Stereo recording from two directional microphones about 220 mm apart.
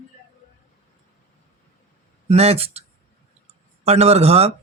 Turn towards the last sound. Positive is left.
turn(degrees=-30)  # may be behind; listen again after turning